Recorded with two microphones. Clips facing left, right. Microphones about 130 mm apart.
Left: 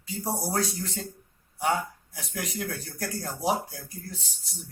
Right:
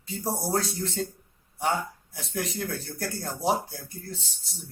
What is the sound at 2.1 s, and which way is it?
Speech, 30° right (ahead or behind).